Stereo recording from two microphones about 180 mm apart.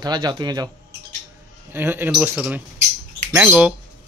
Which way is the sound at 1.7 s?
10° right (ahead or behind).